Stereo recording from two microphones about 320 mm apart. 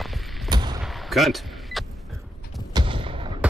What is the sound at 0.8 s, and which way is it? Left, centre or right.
Power windows, centre.